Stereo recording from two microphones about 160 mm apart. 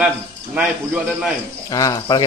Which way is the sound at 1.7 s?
20° left (ahead or behind).